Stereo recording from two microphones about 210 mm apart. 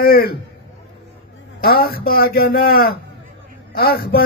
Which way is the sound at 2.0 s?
45° left (ahead or behind).